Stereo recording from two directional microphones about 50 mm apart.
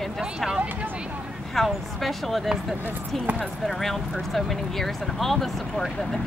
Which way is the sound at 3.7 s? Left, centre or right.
Centre.